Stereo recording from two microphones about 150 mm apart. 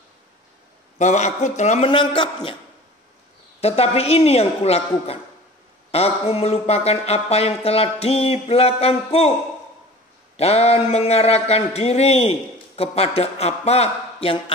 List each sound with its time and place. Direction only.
0.9 s speech: 50° left (ahead or behind)
1.9 s a man's voice: 35° left (ahead or behind)
3.6 s speech: 40° left (ahead or behind)
10.3 s speech: 45° left (ahead or behind)